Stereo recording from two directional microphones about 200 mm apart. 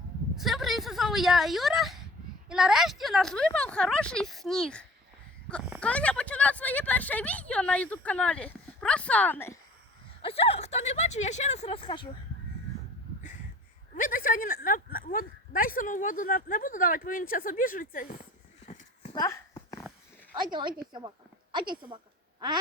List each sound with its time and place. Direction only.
0.3 s speech: centre (ahead or behind)
10.2 s speech: 30° left (ahead or behind)
13.9 s speech: 40° left (ahead or behind)
18.6 s horse: 35° left (ahead or behind)
19.1 s a sound: 15° left (ahead or behind)
20.3 s speech: 20° right (ahead or behind)
21.5 s a sound: 25° right (ahead or behind)